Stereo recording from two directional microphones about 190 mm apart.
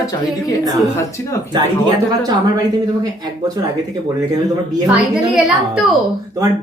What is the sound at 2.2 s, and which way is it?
Speech, 20° right (ahead or behind).